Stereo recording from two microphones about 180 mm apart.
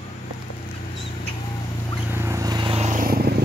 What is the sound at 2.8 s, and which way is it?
Vehicle, 45° right (ahead or behind).